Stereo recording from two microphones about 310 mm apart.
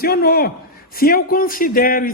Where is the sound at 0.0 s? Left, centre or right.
Left.